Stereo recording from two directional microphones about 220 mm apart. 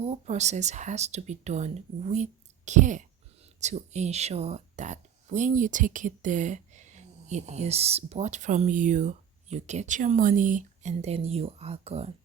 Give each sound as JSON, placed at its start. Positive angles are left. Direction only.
{"t": 0.0, "sound": "speech", "side_deg": -30}